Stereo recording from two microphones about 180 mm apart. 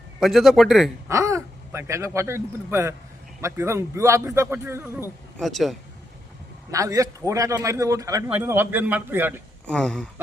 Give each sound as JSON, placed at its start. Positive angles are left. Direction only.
{"t": 0.2, "sound": "a man's voice", "side_deg": 0}
{"t": 1.0, "sound": "a man's voice", "side_deg": -15}
{"t": 5.4, "sound": "a man's voice", "side_deg": 0}
{"t": 6.7, "sound": "a man's voice", "side_deg": -20}
{"t": 9.6, "sound": "a man's voice", "side_deg": 5}